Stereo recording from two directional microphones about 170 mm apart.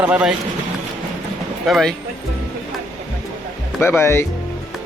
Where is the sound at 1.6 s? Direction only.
Centre (ahead or behind).